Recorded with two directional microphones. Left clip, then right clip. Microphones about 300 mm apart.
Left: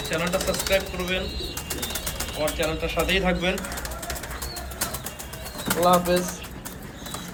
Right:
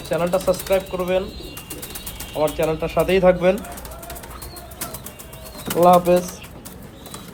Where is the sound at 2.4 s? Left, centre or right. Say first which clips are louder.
Right 6 dB; centre.